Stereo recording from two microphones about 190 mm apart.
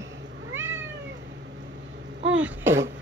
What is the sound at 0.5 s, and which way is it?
Cat, 15° right (ahead or behind).